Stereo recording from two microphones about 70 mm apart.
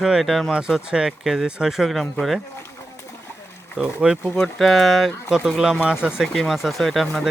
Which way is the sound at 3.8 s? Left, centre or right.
Centre.